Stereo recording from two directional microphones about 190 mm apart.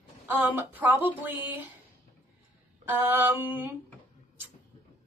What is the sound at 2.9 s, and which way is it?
Speech, 10° right (ahead or behind).